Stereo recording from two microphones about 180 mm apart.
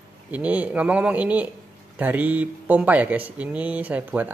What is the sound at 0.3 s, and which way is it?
Speech, 10° right (ahead or behind).